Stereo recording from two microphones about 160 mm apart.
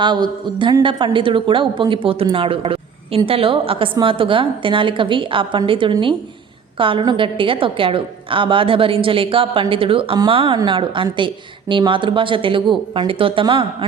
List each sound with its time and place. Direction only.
0.0 s a woman's voice: 30° right (ahead or behind)